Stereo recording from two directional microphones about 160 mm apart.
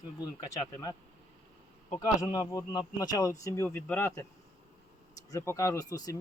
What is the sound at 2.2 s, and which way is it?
Speech, 25° left (ahead or behind).